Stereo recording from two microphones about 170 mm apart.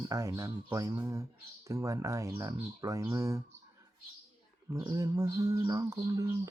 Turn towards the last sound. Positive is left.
turn(degrees=-20)  # may be behind; listen again after turning